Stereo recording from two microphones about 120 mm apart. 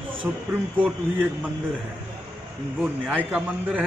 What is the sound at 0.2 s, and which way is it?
Speech, 15° right (ahead or behind).